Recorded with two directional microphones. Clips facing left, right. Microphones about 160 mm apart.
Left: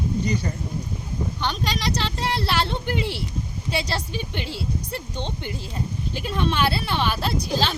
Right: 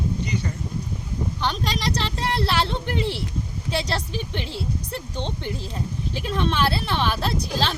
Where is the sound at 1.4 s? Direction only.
Centre (ahead or behind).